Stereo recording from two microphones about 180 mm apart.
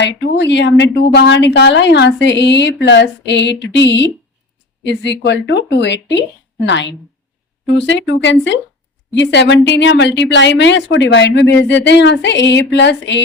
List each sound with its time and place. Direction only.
0.0 s a woman's voice: 75° left (ahead or behind)
6.7 s a woman's voice: 90° left